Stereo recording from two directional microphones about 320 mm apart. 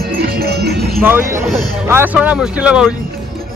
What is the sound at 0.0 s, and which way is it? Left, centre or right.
Music, right.